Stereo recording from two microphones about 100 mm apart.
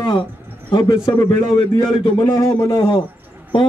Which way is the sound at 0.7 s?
45° left (ahead or behind).